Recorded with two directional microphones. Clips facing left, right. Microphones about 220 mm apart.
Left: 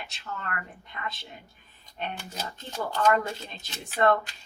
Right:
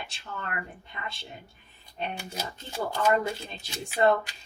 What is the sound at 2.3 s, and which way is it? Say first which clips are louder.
Speech: right 1 dB; 10° right (ahead or behind).